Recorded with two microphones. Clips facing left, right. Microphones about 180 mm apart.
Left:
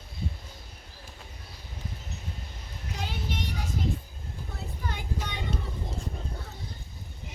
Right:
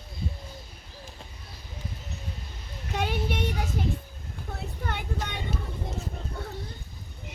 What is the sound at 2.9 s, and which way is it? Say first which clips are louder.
Child singing: right 7 dB; 65° right (ahead or behind).